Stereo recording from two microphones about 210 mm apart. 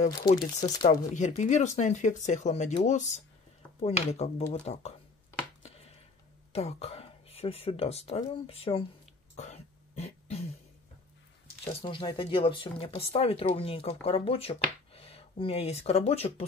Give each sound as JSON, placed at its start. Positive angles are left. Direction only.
{"t": 0.0, "sound": "speech", "side_deg": 35}
{"t": 6.5, "sound": "speech", "side_deg": 30}
{"t": 9.4, "sound": "throat clearing", "side_deg": 30}
{"t": 11.6, "sound": "speech", "side_deg": 25}